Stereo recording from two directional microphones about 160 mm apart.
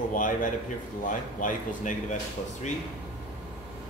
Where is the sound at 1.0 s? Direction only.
55° left (ahead or behind).